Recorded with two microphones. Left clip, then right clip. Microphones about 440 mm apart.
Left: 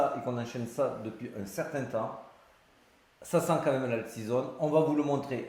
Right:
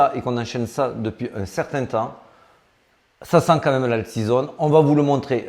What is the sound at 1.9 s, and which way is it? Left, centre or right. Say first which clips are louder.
Speech: right 11 dB; right.